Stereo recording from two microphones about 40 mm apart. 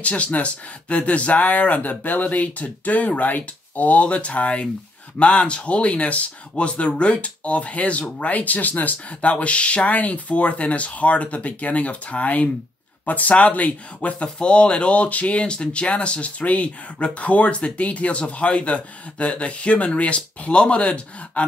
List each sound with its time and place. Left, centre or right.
0.0 s speech: left
14.2 s speech: left